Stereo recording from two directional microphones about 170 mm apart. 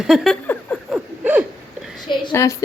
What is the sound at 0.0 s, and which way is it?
Speech, centre (ahead or behind).